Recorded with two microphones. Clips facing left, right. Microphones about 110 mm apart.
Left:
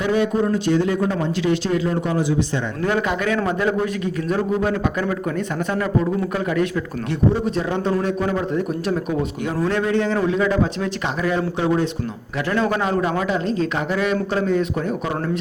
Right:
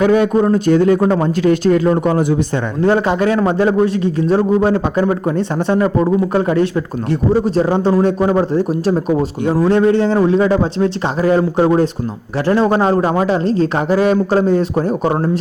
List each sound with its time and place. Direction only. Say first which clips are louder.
0.0 s speech: right 7 dB; 55° right (ahead or behind)
2.8 s a man's voice: right 8 dB; 30° right (ahead or behind)